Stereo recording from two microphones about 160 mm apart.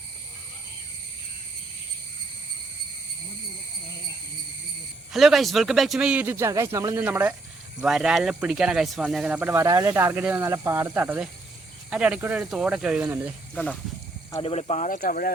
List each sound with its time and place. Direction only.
5.1 s speech: centre (ahead or behind)
14.4 s speech: 40° left (ahead or behind); by 15.3 s 60° left (ahead or behind)